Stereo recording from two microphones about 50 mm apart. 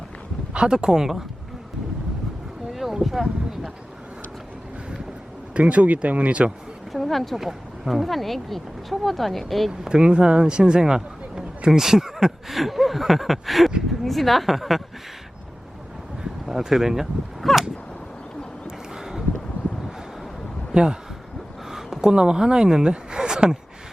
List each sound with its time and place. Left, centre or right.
0.5 s speech: centre
2.7 s a sound: centre
5.5 s speech: right
6.9 s speech: centre
9.8 s speech: centre
16.2 s speech: centre
17.4 s speech: centre
18.9 s a sound: centre
20.7 s speech: centre